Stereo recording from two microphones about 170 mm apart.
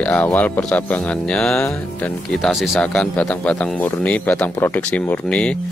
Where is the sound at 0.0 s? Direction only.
10° left (ahead or behind).